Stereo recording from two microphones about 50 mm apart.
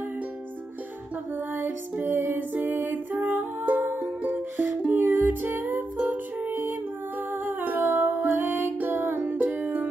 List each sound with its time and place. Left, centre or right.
1.3 s music: right
5.9 s music: right
6.5 s music: right